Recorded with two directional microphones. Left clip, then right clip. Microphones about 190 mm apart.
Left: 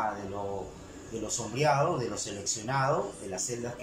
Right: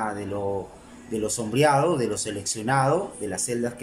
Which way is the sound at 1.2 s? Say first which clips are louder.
Right 7 dB; 55° right (ahead or behind).